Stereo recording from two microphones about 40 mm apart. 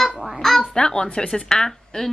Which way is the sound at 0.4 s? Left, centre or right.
Centre.